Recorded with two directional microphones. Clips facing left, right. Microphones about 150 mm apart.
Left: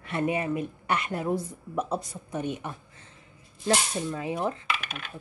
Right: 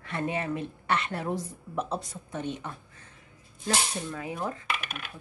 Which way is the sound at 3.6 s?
25° left (ahead or behind).